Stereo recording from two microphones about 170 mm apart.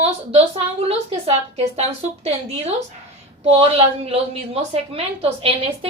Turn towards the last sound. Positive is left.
turn(degrees=-35)  # may be behind; listen again after turning